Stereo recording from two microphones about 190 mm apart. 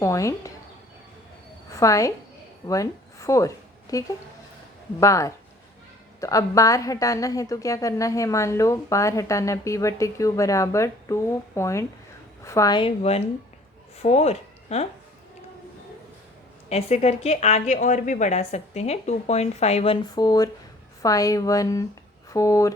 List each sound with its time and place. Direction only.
0.0 s a woman's voice: 15° left (ahead or behind)
1.7 s a woman's voice: 15° left (ahead or behind); by 14.8 s 35° left (ahead or behind)
16.6 s a woman's voice: 35° left (ahead or behind); by 22.7 s 15° left (ahead or behind)